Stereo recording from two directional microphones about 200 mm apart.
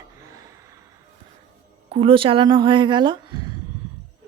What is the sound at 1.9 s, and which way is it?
A woman's voice, 25° right (ahead or behind).